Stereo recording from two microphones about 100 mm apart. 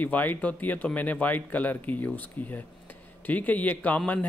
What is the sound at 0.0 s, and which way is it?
Speech, 15° left (ahead or behind).